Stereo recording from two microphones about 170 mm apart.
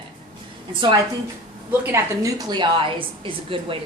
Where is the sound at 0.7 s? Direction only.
25° right (ahead or behind).